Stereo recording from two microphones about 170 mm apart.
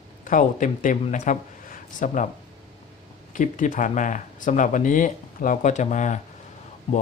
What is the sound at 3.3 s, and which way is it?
Speech, 50° left (ahead or behind).